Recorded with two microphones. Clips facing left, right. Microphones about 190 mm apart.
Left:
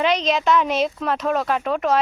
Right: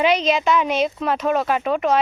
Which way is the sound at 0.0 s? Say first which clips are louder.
Right 2 dB; 5° right (ahead or behind).